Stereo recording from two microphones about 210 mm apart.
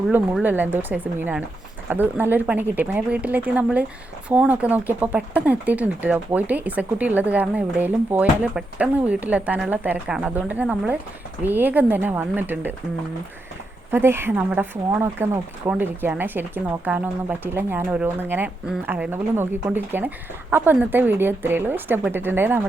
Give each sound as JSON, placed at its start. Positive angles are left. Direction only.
{"t": 0.1, "sound": "speech", "side_deg": -10}
{"t": 13.9, "sound": "speech", "side_deg": -10}